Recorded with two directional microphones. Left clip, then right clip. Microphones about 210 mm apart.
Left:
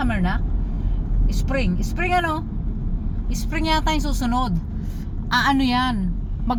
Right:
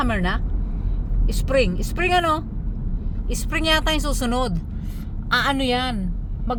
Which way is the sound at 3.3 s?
25° right (ahead or behind).